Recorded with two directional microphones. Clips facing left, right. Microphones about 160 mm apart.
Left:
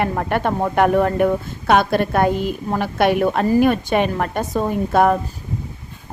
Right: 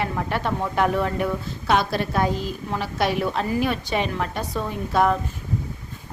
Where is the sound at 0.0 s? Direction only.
55° left (ahead or behind).